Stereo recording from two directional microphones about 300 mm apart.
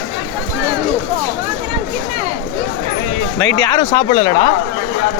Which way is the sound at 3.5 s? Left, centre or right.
Centre.